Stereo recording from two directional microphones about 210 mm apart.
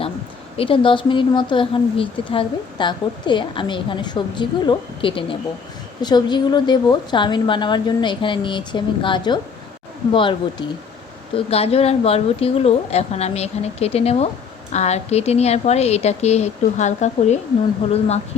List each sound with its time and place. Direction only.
0.5 s speech: 25° left (ahead or behind)